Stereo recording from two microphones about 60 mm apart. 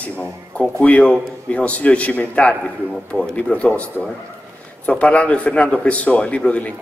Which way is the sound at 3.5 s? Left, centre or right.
Left.